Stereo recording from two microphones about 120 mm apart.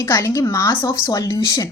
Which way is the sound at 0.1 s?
25° left (ahead or behind).